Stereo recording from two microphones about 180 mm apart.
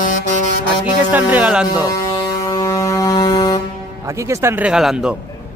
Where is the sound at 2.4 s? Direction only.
20° left (ahead or behind).